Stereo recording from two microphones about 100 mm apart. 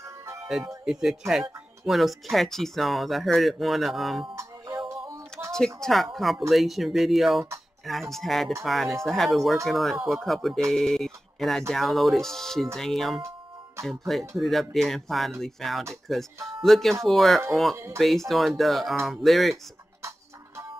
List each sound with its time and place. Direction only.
0.0 s music: 30° right (ahead or behind)
0.8 s speech: 5° right (ahead or behind)
4.8 s tick: 30° right (ahead or behind)
5.8 s speech: centre (ahead or behind)
19.5 s music: 30° right (ahead or behind)